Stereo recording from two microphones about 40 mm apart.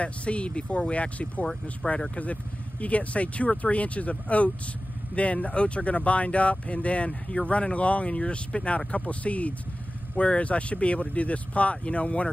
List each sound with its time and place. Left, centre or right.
0.0 s speech: left
1.4 s speech: centre
2.8 s speech: left